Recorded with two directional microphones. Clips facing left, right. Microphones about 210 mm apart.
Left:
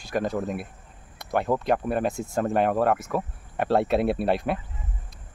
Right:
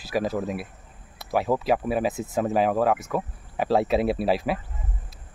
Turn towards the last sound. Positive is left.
turn(degrees=0)  # may be behind; listen again after turning